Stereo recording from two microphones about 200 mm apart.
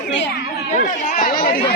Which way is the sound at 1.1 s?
45° left (ahead or behind).